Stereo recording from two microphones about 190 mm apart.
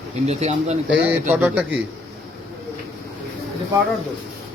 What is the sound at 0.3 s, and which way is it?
Speech, 35° right (ahead or behind).